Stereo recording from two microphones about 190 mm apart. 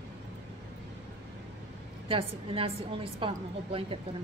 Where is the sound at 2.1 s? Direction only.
30° right (ahead or behind).